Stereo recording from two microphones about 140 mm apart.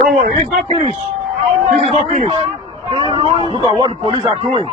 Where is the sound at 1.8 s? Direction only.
55° right (ahead or behind).